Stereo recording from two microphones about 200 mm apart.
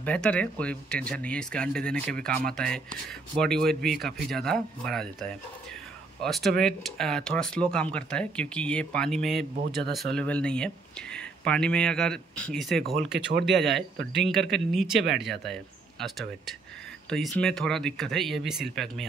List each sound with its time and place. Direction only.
0.0 s speech: 5° left (ahead or behind)
15.0 s speech: 60° right (ahead or behind)
15.4 s speech: centre (ahead or behind)